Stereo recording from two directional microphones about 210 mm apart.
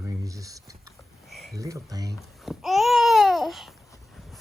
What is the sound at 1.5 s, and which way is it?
Speech, 15° right (ahead or behind).